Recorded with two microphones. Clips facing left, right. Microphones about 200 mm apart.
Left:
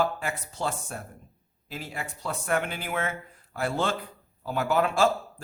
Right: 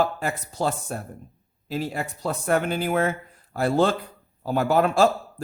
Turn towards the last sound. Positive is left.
turn(degrees=-40)  # may be behind; listen again after turning